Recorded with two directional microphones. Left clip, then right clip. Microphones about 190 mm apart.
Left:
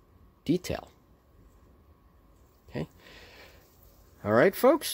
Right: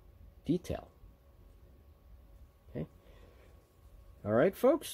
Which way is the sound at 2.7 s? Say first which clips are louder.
Left 6 dB; 30° left (ahead or behind).